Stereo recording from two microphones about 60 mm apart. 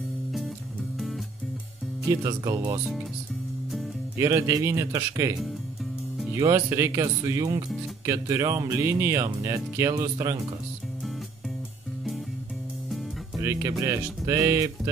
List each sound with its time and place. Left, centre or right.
2.0 s speech: right
4.2 s speech: right
6.4 s speech: right
13.4 s speech: right